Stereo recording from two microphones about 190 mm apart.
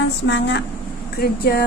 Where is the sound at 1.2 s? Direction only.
55° left (ahead or behind).